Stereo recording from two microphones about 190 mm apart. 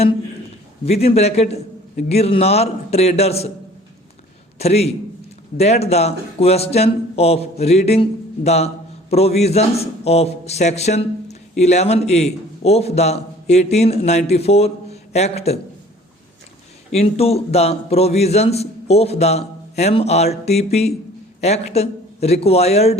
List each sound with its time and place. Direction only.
1.0 s a man's voice: 35° left (ahead or behind)
4.5 s a man's voice: 35° left (ahead or behind)
16.9 s a man's voice: 35° left (ahead or behind)